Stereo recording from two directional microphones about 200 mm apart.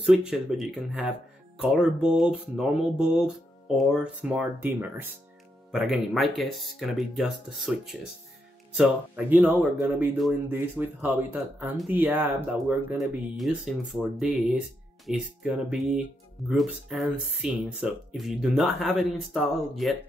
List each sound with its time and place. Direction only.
0.0 s speech: centre (ahead or behind)